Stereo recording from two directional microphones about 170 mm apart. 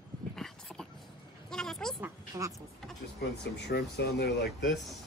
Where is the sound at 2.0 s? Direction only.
20° right (ahead or behind).